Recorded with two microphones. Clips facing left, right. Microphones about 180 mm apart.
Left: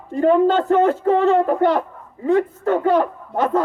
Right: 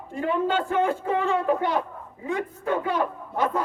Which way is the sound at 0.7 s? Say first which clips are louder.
Left 8 dB; 50° left (ahead or behind).